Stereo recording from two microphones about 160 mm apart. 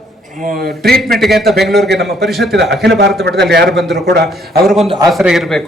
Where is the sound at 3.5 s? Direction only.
90° right.